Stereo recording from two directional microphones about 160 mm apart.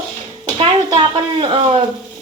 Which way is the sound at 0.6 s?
30° right (ahead or behind).